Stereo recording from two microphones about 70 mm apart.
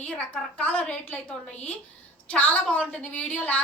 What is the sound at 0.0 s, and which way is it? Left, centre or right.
A woman's voice, left.